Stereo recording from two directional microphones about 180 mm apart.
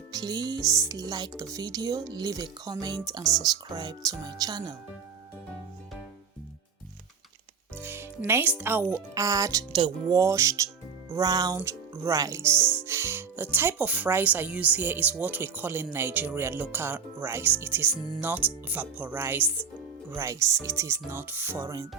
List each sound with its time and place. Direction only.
0.1 s speech: 20° right (ahead or behind)
7.8 s speech: 10° right (ahead or behind)